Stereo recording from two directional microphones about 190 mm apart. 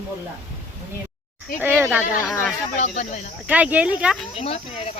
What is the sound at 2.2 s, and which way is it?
Cricket, 10° left (ahead or behind).